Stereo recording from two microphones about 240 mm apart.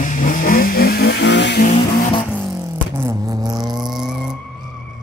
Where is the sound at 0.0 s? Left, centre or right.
Left.